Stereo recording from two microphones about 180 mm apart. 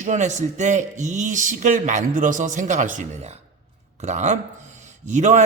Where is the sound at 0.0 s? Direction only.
40° right (ahead or behind).